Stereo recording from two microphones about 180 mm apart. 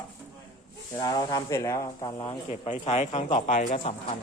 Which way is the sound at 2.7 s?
40° left (ahead or behind).